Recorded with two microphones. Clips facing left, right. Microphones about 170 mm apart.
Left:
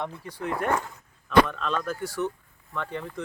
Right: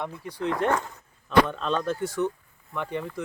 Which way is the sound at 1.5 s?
30° right (ahead or behind).